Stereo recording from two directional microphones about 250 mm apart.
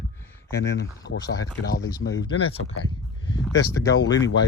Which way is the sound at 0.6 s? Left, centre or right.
Left.